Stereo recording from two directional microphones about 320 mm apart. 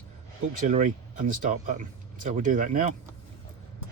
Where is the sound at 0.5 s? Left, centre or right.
Right.